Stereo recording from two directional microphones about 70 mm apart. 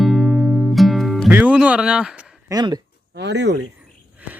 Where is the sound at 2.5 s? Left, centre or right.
Right.